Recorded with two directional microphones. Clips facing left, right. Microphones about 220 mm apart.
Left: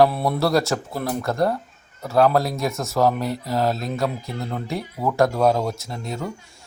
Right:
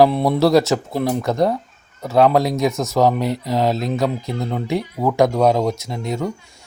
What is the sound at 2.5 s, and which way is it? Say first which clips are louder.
Speech: right 6 dB; 20° right (ahead or behind).